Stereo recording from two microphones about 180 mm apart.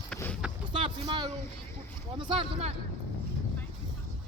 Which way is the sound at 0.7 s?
30° right (ahead or behind).